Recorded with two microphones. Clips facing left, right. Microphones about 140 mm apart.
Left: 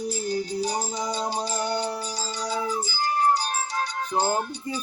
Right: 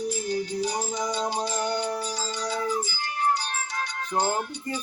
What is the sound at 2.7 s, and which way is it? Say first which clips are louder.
Music: left 1 dB; 35° left (ahead or behind).